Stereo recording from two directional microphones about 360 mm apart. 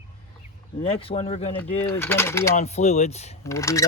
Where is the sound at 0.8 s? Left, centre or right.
Centre.